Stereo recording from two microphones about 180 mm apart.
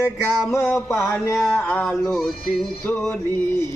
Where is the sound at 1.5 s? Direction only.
10° left (ahead or behind).